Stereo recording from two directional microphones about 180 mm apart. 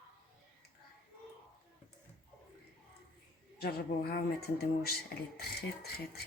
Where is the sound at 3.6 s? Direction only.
60° left (ahead or behind).